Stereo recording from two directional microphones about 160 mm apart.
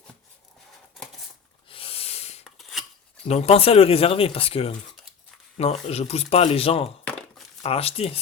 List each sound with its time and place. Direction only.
1.7 s a sound: 35° left (ahead or behind)
2.4 s filing: centre (ahead or behind)
3.2 s speech: 40° left (ahead or behind)
7.0 s thunk: 5° left (ahead or behind)
7.6 s speech: 40° left (ahead or behind)